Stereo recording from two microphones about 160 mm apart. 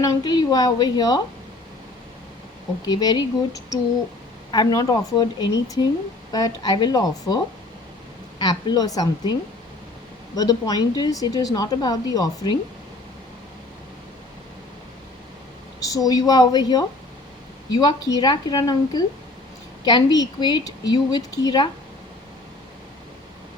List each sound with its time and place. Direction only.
0.0 s speech: 25° left (ahead or behind)
2.8 s speech: 25° left (ahead or behind)
8.4 s speech: 25° left (ahead or behind)
10.3 s speech: 25° left (ahead or behind)
15.8 s speech: 20° left (ahead or behind)